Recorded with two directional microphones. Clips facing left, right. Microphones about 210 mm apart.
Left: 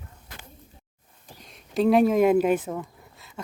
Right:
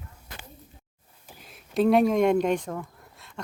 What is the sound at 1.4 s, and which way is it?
Speech, 5° right (ahead or behind).